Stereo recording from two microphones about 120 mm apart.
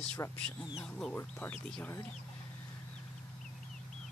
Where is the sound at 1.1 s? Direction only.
15° left (ahead or behind).